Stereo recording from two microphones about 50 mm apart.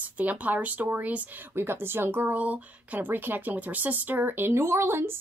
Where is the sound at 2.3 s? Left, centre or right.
Right.